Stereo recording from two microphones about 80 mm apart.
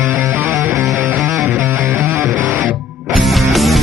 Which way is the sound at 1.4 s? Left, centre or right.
Right.